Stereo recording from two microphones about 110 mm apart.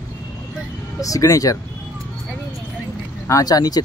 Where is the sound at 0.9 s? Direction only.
30° left (ahead or behind).